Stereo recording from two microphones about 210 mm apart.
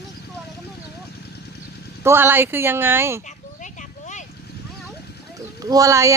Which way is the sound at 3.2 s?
35° left (ahead or behind).